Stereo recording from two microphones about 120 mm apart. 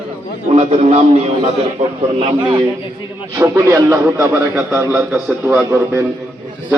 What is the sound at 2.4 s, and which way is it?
Speech, 35° right (ahead or behind).